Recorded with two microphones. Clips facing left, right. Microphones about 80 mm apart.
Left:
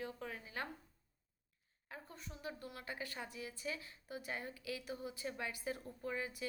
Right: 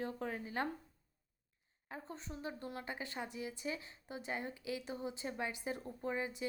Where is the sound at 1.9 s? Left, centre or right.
Right.